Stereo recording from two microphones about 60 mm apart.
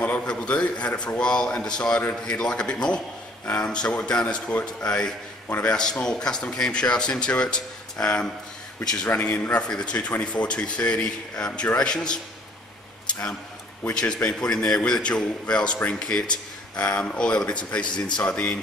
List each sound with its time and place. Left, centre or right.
0.3 s speech: centre
9.0 s a man's voice: left
13.0 s a sound: centre
13.9 s a man's voice: centre